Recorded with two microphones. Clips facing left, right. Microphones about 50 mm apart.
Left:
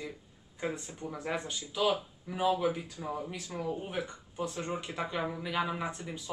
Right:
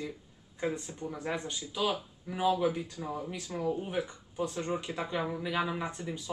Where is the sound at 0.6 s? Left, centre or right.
Centre.